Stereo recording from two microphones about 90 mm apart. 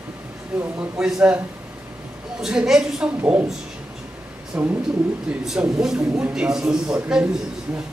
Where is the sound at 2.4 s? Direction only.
5° right (ahead or behind).